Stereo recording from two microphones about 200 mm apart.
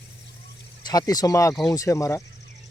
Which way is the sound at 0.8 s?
20° left (ahead or behind).